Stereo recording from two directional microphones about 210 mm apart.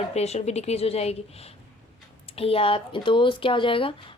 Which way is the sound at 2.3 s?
25° left (ahead or behind).